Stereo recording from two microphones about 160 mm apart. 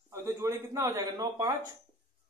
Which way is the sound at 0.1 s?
20° right (ahead or behind).